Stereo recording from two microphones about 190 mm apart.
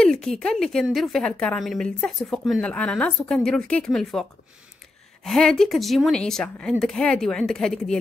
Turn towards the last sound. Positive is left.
turn(degrees=5)  # may be behind; listen again after turning